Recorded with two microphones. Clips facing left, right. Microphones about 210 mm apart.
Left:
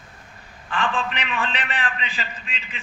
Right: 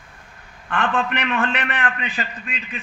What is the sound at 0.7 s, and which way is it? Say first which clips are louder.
A man's voice: right 3 dB; 60° right (ahead or behind).